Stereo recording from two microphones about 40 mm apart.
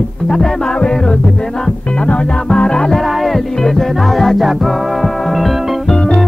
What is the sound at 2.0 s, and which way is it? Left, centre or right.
Music, left.